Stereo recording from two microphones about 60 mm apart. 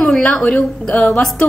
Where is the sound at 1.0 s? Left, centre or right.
Centre.